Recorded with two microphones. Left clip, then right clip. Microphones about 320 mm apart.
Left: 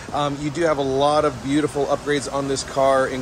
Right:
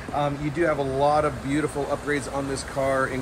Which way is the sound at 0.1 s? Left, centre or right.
Centre.